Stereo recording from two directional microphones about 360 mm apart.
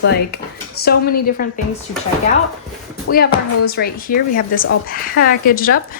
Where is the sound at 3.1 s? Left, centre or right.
Left.